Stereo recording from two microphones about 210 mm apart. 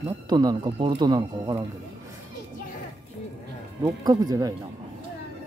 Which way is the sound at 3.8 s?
15° right (ahead or behind).